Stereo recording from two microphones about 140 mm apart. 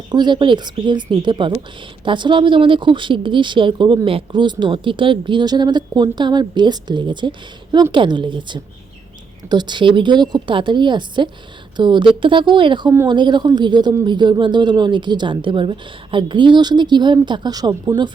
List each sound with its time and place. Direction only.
0.1 s speech: 35° right (ahead or behind)